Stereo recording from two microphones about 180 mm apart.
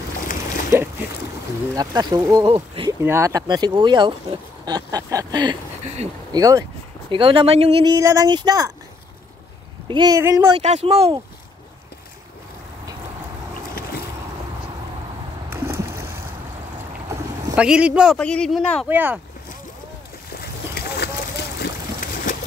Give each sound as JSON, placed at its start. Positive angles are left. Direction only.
{"t": 0.7, "sound": "boat", "side_deg": -15}
{"t": 1.8, "sound": "speech", "side_deg": -20}
{"t": 2.4, "sound": "speech", "side_deg": -30}
{"t": 2.9, "sound": "speech", "side_deg": -15}
{"t": 9.8, "sound": "speech", "side_deg": -25}
{"t": 10.6, "sound": "speech", "side_deg": -35}
{"t": 15.5, "sound": "a sound", "side_deg": -15}
{"t": 17.6, "sound": "speech", "side_deg": -5}
{"t": 18.9, "sound": "speech", "side_deg": -10}
{"t": 20.3, "sound": "boat", "side_deg": 65}